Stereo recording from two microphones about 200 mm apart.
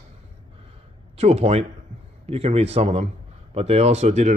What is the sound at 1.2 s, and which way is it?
Speech, 30° right (ahead or behind).